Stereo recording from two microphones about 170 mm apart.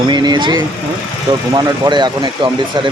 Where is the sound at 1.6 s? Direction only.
25° right (ahead or behind).